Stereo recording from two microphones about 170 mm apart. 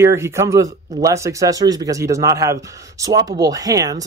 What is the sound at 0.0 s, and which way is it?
Speech, 15° right (ahead or behind).